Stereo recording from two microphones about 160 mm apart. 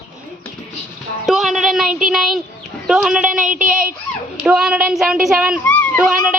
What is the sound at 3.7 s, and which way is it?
Speech, 60° right (ahead or behind).